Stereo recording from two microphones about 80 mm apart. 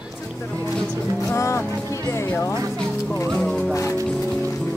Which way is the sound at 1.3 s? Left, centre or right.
Left.